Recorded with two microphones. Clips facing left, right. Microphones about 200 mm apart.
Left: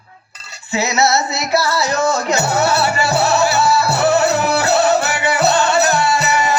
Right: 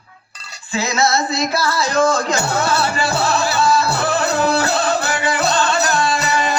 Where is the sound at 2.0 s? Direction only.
25° left (ahead or behind).